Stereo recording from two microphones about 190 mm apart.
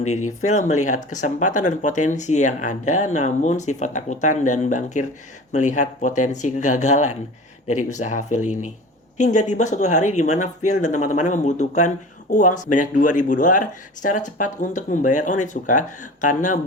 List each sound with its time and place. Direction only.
0.0 s speech: 35° left (ahead or behind)